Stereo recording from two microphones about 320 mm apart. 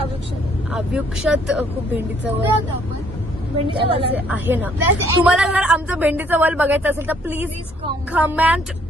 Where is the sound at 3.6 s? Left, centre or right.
Centre.